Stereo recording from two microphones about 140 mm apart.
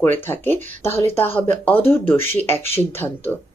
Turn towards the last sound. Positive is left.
turn(degrees=15)  # may be behind; listen again after turning